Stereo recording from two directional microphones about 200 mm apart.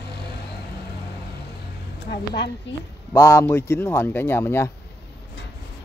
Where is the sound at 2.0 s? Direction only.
55° left (ahead or behind).